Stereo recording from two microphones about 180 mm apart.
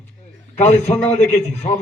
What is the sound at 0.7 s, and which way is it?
Speech, 10° left (ahead or behind).